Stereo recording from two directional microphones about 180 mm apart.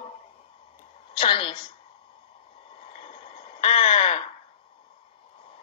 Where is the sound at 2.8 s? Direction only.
30° left (ahead or behind).